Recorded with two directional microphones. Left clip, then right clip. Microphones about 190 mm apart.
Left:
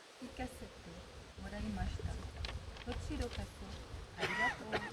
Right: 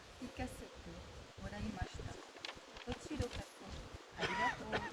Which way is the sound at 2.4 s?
10° left (ahead or behind).